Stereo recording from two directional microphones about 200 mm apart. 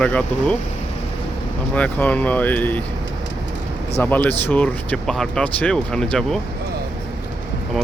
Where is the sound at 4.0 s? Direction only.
10° left (ahead or behind).